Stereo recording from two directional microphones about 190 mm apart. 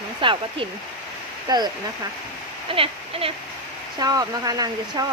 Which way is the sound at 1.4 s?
20° right (ahead or behind).